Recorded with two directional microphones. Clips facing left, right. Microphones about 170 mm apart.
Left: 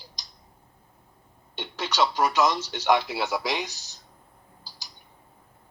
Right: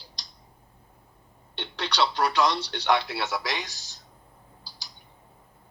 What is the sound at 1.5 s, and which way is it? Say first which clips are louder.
Speech: left 1 dB; 5° left (ahead or behind).